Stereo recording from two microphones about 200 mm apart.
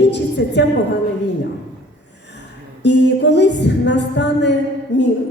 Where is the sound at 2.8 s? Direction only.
60° left (ahead or behind).